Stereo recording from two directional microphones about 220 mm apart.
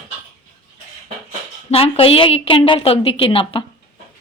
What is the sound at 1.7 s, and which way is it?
A woman's voice, 25° left (ahead or behind).